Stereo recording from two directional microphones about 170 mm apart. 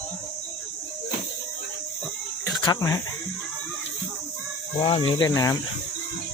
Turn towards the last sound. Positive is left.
turn(degrees=20)  # may be behind; listen again after turning